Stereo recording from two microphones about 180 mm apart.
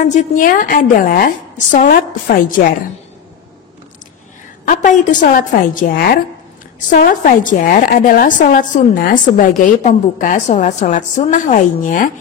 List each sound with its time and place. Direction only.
0.0 s a woman's voice: 45° left (ahead or behind)
4.6 s a woman's voice: 45° left (ahead or behind)